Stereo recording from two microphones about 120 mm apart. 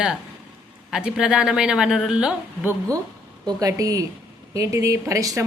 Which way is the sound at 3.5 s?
30° right (ahead or behind).